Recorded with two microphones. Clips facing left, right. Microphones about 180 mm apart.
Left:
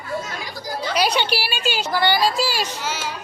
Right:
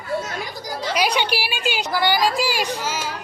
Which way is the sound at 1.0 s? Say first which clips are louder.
Left 1 dB; 10° right (ahead or behind).